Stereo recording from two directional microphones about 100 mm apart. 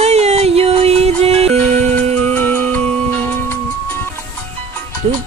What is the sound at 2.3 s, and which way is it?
Music, 20° left (ahead or behind).